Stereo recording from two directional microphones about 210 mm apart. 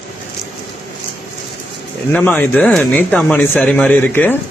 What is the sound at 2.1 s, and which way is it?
Speech, 5° left (ahead or behind).